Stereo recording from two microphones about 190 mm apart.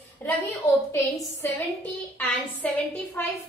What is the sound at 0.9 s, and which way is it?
A woman's voice, 15° left (ahead or behind).